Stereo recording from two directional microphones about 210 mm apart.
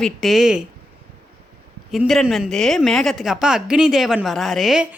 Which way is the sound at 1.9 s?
Centre (ahead or behind).